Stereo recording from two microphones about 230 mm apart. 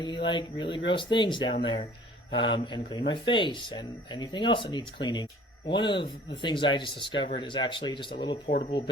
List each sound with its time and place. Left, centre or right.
0.0 s speech: centre
8.4 s speech: left